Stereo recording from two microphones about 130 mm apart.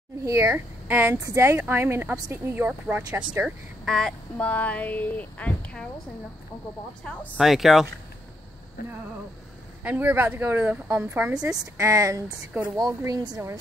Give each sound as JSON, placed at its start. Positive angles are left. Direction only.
{"t": 0.2, "sound": "speech", "side_deg": -25}
{"t": 3.4, "sound": "speech", "side_deg": 0}
{"t": 7.3, "sound": "speech", "side_deg": 0}
{"t": 9.8, "sound": "speech", "side_deg": -15}
{"t": 11.8, "sound": "speech", "side_deg": -25}